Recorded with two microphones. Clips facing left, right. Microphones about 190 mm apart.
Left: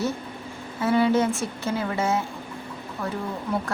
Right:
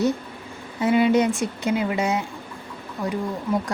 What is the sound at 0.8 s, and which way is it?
A woman's voice, 15° right (ahead or behind).